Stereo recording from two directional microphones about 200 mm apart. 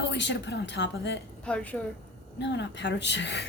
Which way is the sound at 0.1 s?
60° left (ahead or behind).